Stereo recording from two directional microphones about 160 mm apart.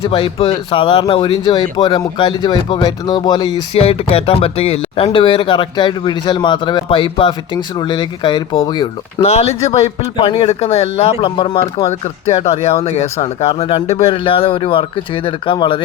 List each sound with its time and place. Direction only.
0.0 s speech: 35° left (ahead or behind)
9.2 s speech: 40° left (ahead or behind)
11.9 s speech: 40° left (ahead or behind)